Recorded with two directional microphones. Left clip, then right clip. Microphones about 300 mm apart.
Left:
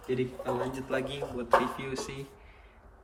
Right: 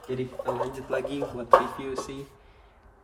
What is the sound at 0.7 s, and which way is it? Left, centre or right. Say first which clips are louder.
Speech: right 3 dB; centre.